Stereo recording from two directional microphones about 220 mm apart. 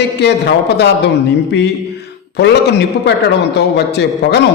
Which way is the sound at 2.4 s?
50° left (ahead or behind).